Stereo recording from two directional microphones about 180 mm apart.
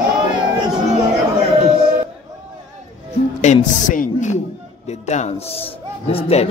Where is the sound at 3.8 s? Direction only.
45° left (ahead or behind).